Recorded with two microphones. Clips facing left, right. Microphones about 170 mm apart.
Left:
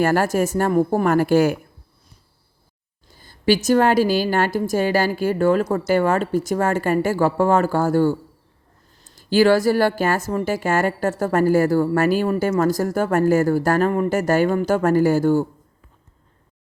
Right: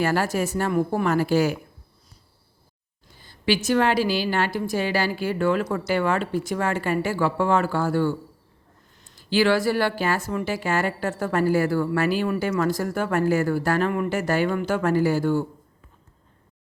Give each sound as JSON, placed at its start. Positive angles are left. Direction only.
{"t": 0.0, "sound": "a woman's voice", "side_deg": 50}
{"t": 3.2, "sound": "a woman's voice", "side_deg": 40}